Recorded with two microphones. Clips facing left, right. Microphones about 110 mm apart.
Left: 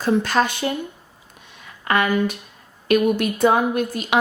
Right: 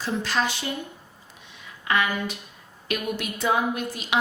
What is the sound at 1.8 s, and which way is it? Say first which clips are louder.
A woman's voice: left 6 dB; 50° left (ahead or behind).